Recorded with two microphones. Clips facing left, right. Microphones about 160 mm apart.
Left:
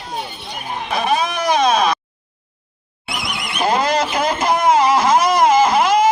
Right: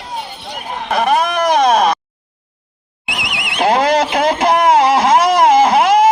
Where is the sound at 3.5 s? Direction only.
75° right (ahead or behind).